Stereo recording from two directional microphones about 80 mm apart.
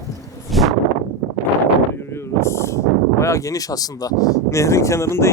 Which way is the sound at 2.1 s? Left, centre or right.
Left.